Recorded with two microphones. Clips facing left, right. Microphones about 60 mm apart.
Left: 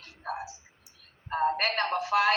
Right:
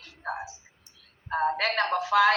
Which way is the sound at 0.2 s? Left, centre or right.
Right.